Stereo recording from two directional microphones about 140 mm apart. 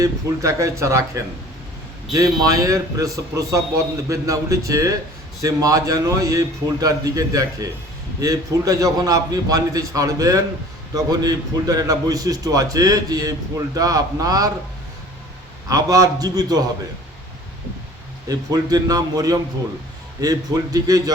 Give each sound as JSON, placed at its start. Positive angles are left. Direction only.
{"t": 0.0, "sound": "a man's voice", "side_deg": -25}
{"t": 15.7, "sound": "a man's voice", "side_deg": -25}
{"t": 18.3, "sound": "a man's voice", "side_deg": -25}